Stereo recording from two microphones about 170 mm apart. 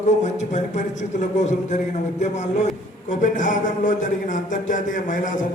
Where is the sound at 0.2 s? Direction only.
45° left (ahead or behind).